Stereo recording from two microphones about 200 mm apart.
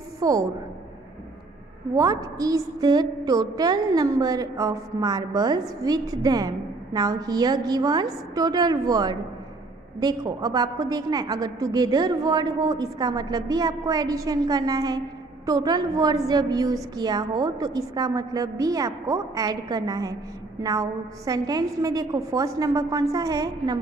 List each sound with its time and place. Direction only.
0.2 s a woman's voice: 15° right (ahead or behind)
2.0 s a woman's voice: 15° right (ahead or behind)